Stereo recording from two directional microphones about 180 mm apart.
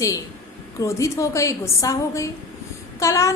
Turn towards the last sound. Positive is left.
turn(degrees=15)  # may be behind; listen again after turning